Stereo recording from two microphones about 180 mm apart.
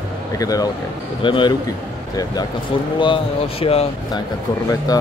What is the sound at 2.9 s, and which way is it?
Speech, 30° left (ahead or behind).